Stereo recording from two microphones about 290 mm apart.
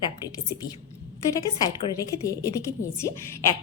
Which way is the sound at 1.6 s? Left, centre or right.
Centre.